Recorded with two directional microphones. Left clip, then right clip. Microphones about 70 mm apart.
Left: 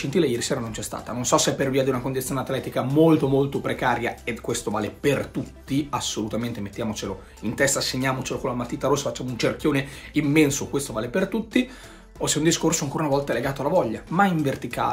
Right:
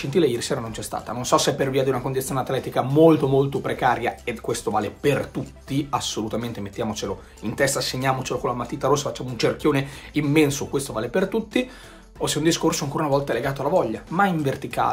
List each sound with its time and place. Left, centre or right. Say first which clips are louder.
0.2 s speech: right 2 dB; right
12.2 s speech: right 1 dB; right